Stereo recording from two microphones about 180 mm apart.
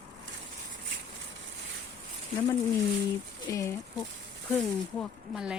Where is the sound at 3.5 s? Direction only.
15° left (ahead or behind).